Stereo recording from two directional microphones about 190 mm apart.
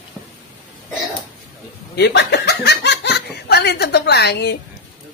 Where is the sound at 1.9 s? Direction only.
60° left (ahead or behind).